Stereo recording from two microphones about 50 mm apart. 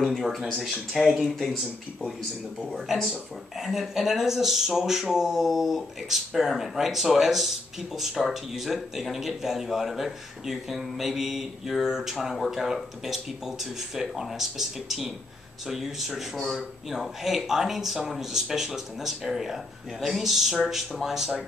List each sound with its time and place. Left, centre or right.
0.0 s speech: centre
3.1 s speech: centre